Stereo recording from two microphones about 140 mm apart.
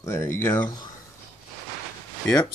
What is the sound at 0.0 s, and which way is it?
Speech, 20° left (ahead or behind).